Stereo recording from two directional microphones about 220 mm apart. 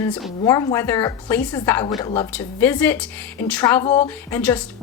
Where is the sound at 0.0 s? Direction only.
10° left (ahead or behind).